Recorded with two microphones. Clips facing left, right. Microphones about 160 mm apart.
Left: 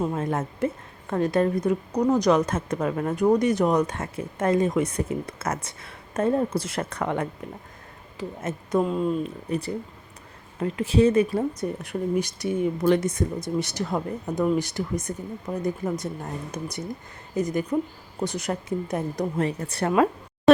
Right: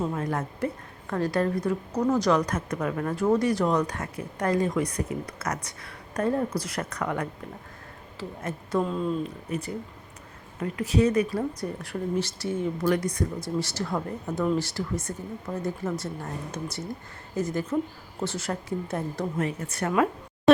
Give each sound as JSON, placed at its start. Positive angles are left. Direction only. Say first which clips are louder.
{"t": 0.1, "sound": "speech", "louder": "left 2 dB", "side_deg": 25}
{"t": 8.8, "sound": "a woman's voice", "louder": "left 3 dB", "side_deg": 10}
{"t": 9.5, "sound": "a woman's voice", "louder": "left 4 dB", "side_deg": 35}
{"t": 19.4, "sound": "speech", "louder": "left 3 dB", "side_deg": 35}